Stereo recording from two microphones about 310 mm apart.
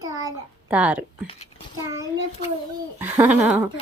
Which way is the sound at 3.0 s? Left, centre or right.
Centre.